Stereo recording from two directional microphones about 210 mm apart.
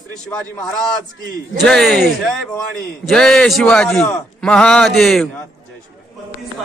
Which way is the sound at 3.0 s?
Centre (ahead or behind).